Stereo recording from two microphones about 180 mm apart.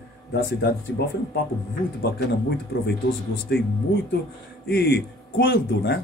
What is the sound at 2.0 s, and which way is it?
A man's voice, 65° left (ahead or behind).